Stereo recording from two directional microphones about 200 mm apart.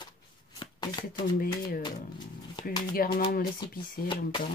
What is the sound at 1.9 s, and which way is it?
Speech, 20° left (ahead or behind).